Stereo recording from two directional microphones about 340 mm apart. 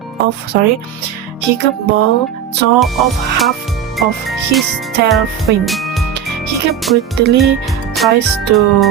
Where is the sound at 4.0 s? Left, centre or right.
Centre.